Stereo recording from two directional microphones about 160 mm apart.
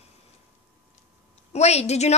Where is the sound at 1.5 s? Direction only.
40° left (ahead or behind).